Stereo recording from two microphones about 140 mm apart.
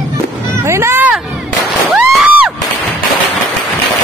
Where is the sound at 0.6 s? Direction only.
20° right (ahead or behind).